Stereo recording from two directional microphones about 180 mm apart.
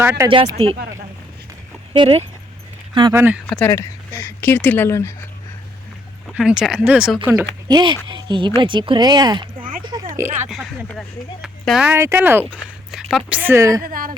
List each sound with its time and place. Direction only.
0.0 s speech: 15° right (ahead or behind)
0.3 s speech: 30° right (ahead or behind)
1.9 s speech: 30° right (ahead or behind)
3.1 s speech: 10° right (ahead or behind)
3.4 s speech: 10° left (ahead or behind)
6.3 s speech: 5° right (ahead or behind)
7.7 s speech: 25° right (ahead or behind)
9.8 s a sound: 25° right (ahead or behind)
11.4 s speech: centre (ahead or behind)
12.9 s a woman's voice: centre (ahead or behind)
13.4 s speech: 15° right (ahead or behind)
13.8 s speech: 50° right (ahead or behind)